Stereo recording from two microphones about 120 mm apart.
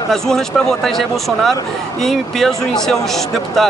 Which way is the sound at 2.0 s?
5° left (ahead or behind).